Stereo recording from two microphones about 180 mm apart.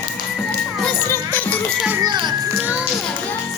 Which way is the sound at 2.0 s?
25° right (ahead or behind).